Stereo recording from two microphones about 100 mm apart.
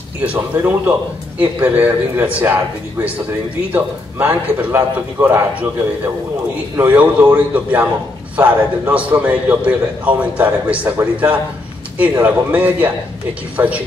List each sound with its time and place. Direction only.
0.2 s a man's voice: 15° right (ahead or behind)
6.8 s a man's voice: 15° right (ahead or behind)